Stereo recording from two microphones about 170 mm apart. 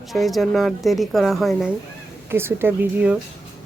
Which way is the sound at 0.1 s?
Centre (ahead or behind).